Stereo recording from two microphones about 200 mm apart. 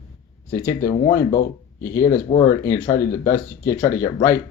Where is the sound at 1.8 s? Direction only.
15° left (ahead or behind).